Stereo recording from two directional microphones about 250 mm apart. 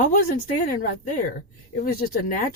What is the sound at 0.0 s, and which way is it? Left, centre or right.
A woman's voice, left.